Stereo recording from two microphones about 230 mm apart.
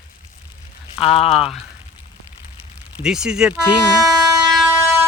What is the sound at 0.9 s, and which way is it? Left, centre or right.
Speech, left.